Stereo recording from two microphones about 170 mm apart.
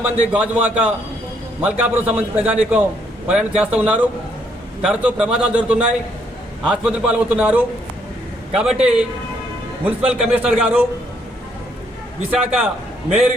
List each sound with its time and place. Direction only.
0.0 s a man's voice: 5° right (ahead or behind)
12.3 s a man's voice: 5° right (ahead or behind)